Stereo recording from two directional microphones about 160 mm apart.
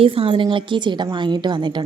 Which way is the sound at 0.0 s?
35° right (ahead or behind).